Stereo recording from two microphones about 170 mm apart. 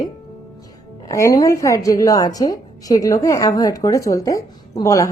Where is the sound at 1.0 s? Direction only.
20° left (ahead or behind).